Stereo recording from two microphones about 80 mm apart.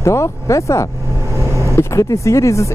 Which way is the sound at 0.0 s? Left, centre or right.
Left.